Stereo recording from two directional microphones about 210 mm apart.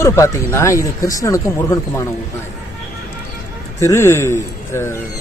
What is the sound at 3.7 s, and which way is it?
A man's voice, 15° left (ahead or behind).